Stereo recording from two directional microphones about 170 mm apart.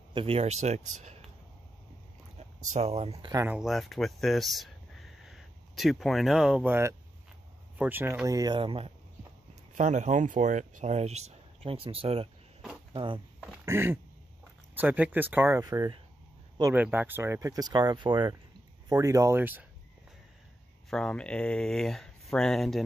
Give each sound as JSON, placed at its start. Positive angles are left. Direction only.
{"t": 0.1, "sound": "speech", "side_deg": -35}
{"t": 2.3, "sound": "speech", "side_deg": -40}
{"t": 3.4, "sound": "speech", "side_deg": -5}
{"t": 9.8, "sound": "speech", "side_deg": -45}
{"t": 13.7, "sound": "speech", "side_deg": -15}
{"t": 16.7, "sound": "speech", "side_deg": -10}
{"t": 20.9, "sound": "speech", "side_deg": 5}